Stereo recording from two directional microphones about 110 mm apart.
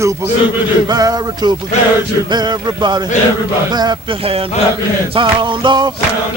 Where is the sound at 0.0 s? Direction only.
25° right (ahead or behind).